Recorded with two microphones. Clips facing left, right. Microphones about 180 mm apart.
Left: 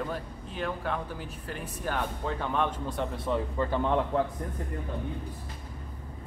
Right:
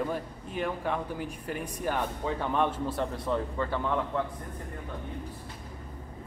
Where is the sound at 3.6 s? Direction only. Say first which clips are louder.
Left 2 dB; 15° left (ahead or behind).